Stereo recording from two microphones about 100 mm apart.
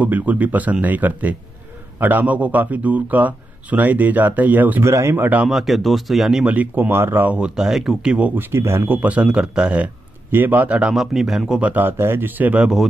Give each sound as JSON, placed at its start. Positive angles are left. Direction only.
{"t": 0.0, "sound": "speech", "side_deg": -15}
{"t": 4.8, "sound": "speech", "side_deg": -30}
{"t": 5.5, "sound": "speech", "side_deg": 0}
{"t": 8.5, "sound": "speech", "side_deg": -25}
{"t": 11.7, "sound": "speech", "side_deg": -20}